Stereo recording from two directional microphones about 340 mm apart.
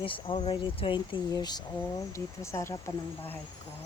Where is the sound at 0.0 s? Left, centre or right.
Centre.